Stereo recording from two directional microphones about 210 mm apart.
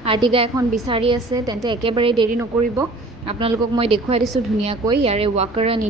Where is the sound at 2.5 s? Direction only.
Centre (ahead or behind).